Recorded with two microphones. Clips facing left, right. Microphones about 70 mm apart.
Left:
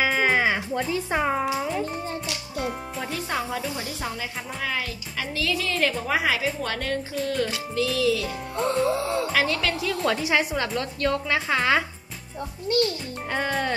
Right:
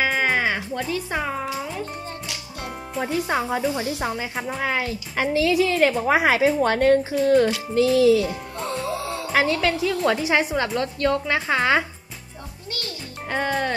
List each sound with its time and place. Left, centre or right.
0.0 s music: centre
1.4 s speech: centre
3.0 s speech: right
5.3 s a woman's voice: centre
6.0 s speech: right
8.3 s music: centre
9.4 s a woman's voice: centre
13.3 s music: centre